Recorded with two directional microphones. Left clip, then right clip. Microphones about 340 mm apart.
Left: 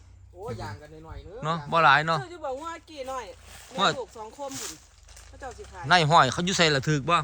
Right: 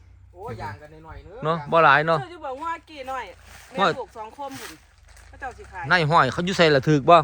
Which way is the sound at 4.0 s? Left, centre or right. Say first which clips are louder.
Right 3 dB; right.